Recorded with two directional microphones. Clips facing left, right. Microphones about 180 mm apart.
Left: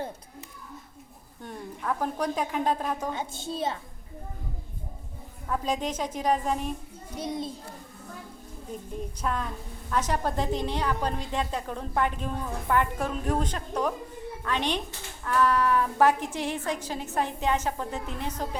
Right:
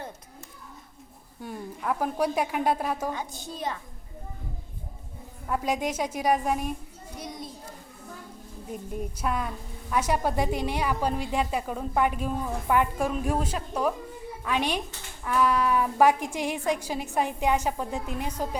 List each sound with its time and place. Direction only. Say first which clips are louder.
1.4 s a woman's voice: right 2 dB; 5° right (ahead or behind)
3.2 s a woman's voice: left 3 dB; 25° left (ahead or behind)
5.5 s a woman's voice: right 1 dB; 10° right (ahead or behind)
7.2 s a woman's voice: left 7 dB; 25° left (ahead or behind)
8.7 s a woman's voice: right 2 dB; 10° right (ahead or behind)